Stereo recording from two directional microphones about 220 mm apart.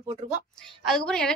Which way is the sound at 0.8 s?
Centre (ahead or behind).